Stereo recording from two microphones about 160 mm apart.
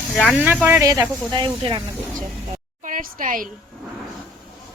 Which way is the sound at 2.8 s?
55° right (ahead or behind).